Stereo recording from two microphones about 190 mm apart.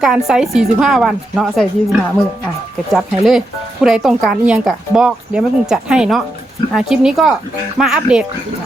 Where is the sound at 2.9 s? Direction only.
Centre (ahead or behind).